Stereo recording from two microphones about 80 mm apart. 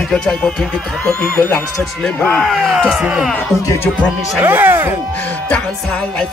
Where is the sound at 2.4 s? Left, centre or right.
Centre.